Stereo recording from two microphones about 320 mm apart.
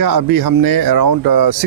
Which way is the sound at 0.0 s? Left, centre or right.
Right.